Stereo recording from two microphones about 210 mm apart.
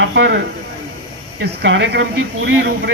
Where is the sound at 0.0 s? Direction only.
55° right (ahead or behind).